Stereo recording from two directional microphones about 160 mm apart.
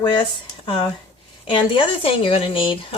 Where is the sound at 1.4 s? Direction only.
30° left (ahead or behind).